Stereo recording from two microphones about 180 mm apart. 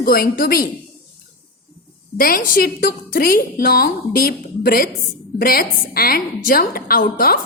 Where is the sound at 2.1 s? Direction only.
55° left (ahead or behind).